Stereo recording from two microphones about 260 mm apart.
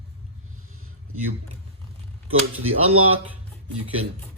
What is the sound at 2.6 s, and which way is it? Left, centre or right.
Speech, right.